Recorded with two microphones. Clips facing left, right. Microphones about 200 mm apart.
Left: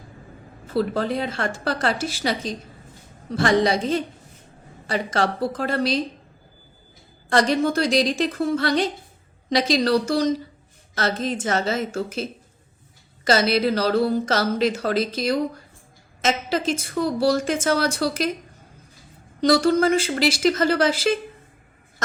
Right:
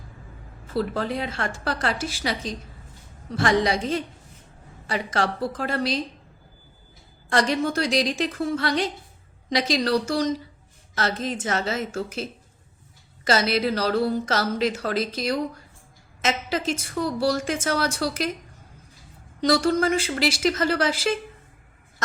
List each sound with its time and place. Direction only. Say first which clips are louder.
0.7 s speech: left 3 dB; 35° left (ahead or behind)
7.3 s speech: left 3 dB; 35° left (ahead or behind)
17.0 s speech: left 3 dB; 30° left (ahead or behind)
19.4 s speech: left 3 dB; 35° left (ahead or behind)